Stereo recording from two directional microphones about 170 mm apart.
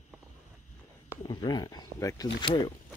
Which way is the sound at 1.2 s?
25° left (ahead or behind).